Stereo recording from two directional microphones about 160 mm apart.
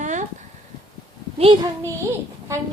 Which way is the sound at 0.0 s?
50° right (ahead or behind).